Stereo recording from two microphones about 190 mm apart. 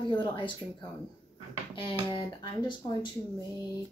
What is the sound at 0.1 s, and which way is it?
Speech, 25° left (ahead or behind).